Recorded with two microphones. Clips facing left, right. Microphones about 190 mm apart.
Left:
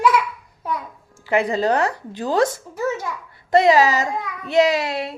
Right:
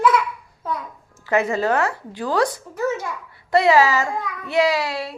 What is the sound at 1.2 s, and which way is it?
Music, 30° left (ahead or behind).